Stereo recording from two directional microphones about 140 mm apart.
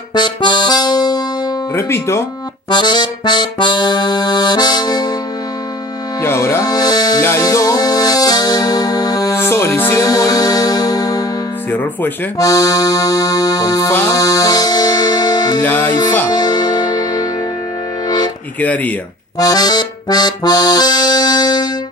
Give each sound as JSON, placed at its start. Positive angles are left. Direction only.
{"t": 0.1, "sound": "music", "side_deg": 30}
{"t": 1.8, "sound": "accordion", "side_deg": 20}
{"t": 2.7, "sound": "accordion", "side_deg": 30}
{"t": 6.2, "sound": "music", "side_deg": 15}
{"t": 11.7, "sound": "speech", "side_deg": 15}
{"t": 12.4, "sound": "accordion", "side_deg": 25}
{"t": 14.1, "sound": "music", "side_deg": 25}
{"t": 15.6, "sound": "music", "side_deg": 10}
{"t": 16.3, "sound": "music", "side_deg": 30}
{"t": 18.6, "sound": "speech", "side_deg": 10}
{"t": 19.3, "sound": "accordion", "side_deg": 25}